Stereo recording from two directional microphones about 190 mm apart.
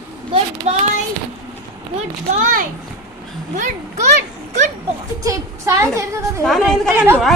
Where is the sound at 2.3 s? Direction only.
40° right (ahead or behind).